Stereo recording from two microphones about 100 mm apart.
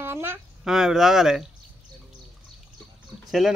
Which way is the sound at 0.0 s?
25° right (ahead or behind).